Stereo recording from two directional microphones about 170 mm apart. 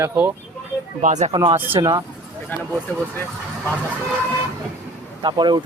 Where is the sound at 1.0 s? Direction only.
45° right (ahead or behind).